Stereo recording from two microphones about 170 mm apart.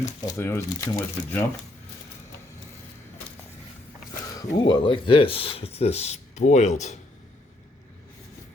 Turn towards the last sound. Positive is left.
turn(degrees=40)  # may be behind; listen again after turning